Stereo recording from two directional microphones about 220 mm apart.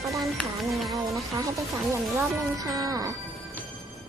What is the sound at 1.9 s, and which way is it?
Speech, 15° right (ahead or behind).